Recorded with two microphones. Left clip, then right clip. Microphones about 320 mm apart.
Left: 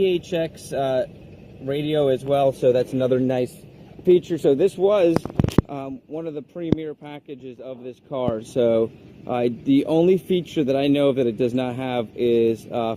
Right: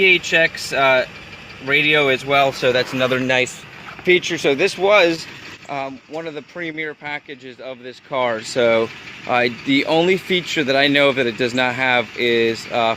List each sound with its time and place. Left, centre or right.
0.0 s speech: right